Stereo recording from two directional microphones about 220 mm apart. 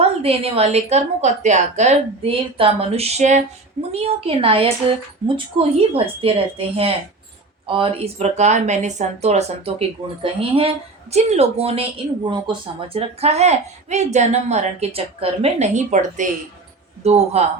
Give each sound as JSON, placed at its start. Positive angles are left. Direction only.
{"t": 0.0, "sound": "a woman's voice", "side_deg": -25}